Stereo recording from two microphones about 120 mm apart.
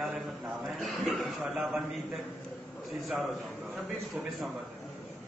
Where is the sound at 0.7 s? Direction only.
Centre (ahead or behind).